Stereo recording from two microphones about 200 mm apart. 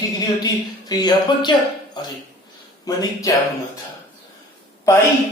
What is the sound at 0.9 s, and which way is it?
Speech, 20° left (ahead or behind).